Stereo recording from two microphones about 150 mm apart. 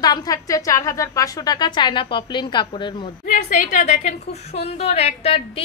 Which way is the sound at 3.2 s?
55° left (ahead or behind).